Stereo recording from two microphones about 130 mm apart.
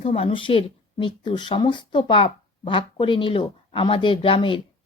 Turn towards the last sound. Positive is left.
turn(degrees=40)  # may be behind; listen again after turning